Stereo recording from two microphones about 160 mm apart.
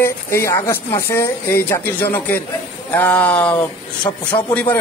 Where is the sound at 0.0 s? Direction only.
15° left (ahead or behind).